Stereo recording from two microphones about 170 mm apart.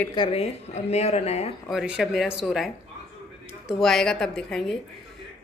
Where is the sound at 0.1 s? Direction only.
30° left (ahead or behind).